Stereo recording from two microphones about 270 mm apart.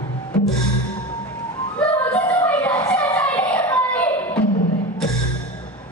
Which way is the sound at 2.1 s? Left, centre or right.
Centre.